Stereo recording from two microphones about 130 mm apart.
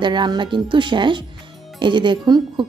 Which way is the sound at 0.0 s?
35° right (ahead or behind).